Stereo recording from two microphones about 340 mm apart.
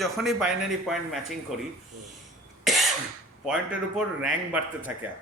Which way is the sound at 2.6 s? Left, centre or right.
Centre.